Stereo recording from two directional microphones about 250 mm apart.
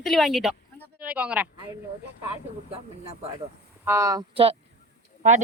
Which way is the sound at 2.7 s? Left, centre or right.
Right.